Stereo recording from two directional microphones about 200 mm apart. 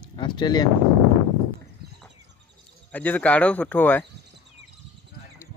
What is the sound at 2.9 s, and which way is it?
Speech, 5° left (ahead or behind).